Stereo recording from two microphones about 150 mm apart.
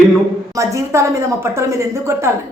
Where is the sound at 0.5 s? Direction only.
20° right (ahead or behind).